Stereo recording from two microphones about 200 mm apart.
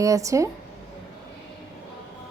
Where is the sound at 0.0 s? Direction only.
15° right (ahead or behind).